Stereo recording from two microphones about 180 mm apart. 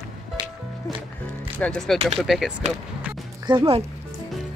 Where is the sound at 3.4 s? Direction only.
30° right (ahead or behind).